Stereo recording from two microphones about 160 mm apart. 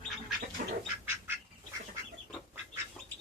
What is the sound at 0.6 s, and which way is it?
Duck, 60° right (ahead or behind).